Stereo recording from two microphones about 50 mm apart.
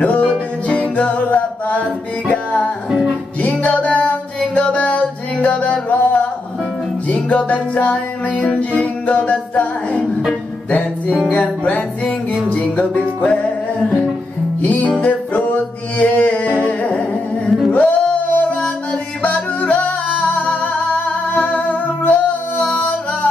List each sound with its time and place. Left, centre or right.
0.0 s music: left
10.7 s music: left
14.6 s music: left
22.6 s music: centre